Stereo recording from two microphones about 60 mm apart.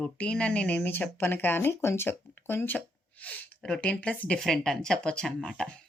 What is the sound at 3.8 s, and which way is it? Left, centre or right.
Speech, left.